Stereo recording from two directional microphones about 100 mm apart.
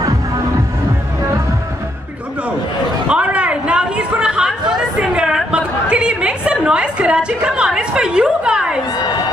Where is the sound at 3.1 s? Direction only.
10° right (ahead or behind).